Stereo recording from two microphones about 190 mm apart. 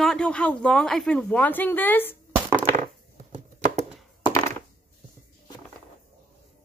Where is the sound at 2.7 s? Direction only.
40° right (ahead or behind).